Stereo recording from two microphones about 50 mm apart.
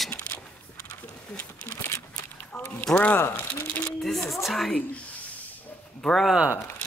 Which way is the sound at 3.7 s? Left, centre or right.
Left.